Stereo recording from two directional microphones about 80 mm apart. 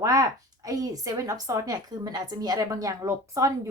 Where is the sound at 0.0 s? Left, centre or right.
Right.